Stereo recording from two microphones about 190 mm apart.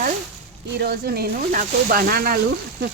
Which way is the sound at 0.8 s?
55° right (ahead or behind).